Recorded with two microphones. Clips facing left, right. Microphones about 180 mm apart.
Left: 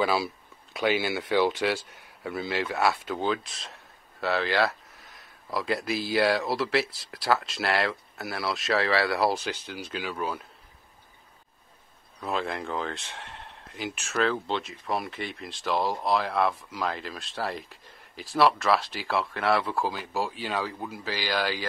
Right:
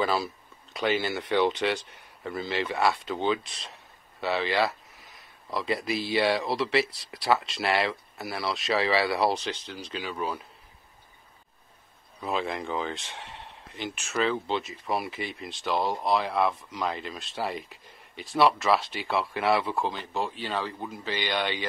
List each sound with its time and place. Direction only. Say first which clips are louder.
0.0 s speech: left 1 dB; 5° left (ahead or behind)
12.2 s speech: even; centre (ahead or behind)